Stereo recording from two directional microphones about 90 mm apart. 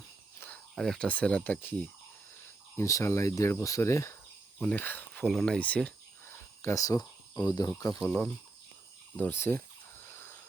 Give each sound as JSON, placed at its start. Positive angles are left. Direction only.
{"t": 0.3, "sound": "cricket", "side_deg": 20}
{"t": 0.8, "sound": "speech", "side_deg": 5}
{"t": 1.0, "sound": "speech", "side_deg": 15}
{"t": 2.7, "sound": "cricket", "side_deg": 35}
{"t": 4.6, "sound": "speech", "side_deg": 20}
{"t": 5.2, "sound": "speech", "side_deg": 5}
{"t": 5.5, "sound": "a sound", "side_deg": 15}
{"t": 6.3, "sound": "cricket", "side_deg": 30}
{"t": 6.8, "sound": "cricket", "side_deg": 45}
{"t": 8.0, "sound": "speech", "side_deg": 15}
{"t": 9.1, "sound": "a sound", "side_deg": 20}